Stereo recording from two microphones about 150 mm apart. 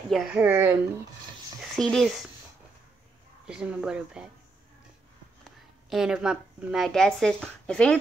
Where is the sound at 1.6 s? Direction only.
5° left (ahead or behind).